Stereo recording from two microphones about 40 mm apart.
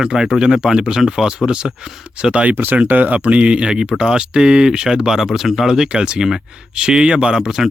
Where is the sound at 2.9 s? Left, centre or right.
Right; by 5.2 s centre.